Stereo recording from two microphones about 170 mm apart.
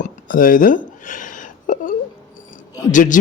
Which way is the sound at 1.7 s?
50° left (ahead or behind).